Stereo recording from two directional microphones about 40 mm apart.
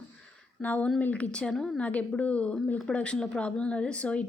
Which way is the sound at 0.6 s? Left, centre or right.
Left.